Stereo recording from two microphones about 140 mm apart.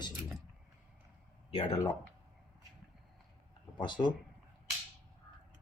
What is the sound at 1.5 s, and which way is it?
Speech, 35° left (ahead or behind).